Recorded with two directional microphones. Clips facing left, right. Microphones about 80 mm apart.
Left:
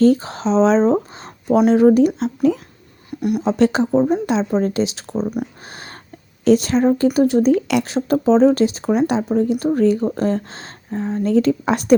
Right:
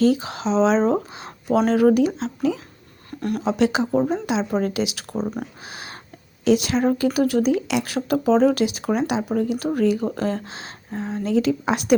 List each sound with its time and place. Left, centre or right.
0.0 s a woman's voice: left
2.1 s speech: left
3.1 s a sound: centre
3.4 s a woman's voice: left
5.4 s speech: centre
6.4 s a woman's voice: left
7.5 s speech: left
7.9 s a woman's voice: left